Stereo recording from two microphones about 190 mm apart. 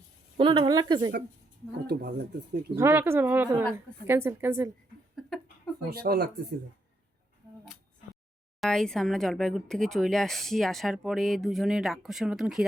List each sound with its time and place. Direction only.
0.3 s speech: 25° right (ahead or behind)
1.9 s speech: 60° right (ahead or behind)
2.7 s speech: 10° right (ahead or behind)
5.9 s speech: 55° right (ahead or behind)
8.6 s speech: 5° left (ahead or behind)